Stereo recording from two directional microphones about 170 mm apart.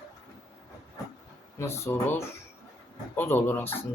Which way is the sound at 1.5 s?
15° left (ahead or behind).